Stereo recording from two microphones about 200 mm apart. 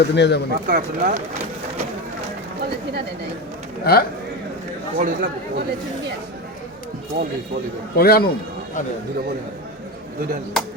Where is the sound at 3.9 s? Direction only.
50° left (ahead or behind).